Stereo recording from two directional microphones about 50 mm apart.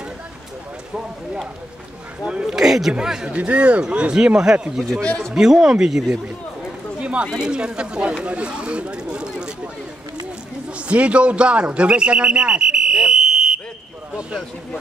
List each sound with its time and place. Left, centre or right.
2.4 s speech: centre
3.3 s speech: right
4.4 s speech: centre
5.0 s a man's voice: left
5.3 s speech: centre
7.0 s a sound: right
7.3 s speech: centre
10.9 s speech: right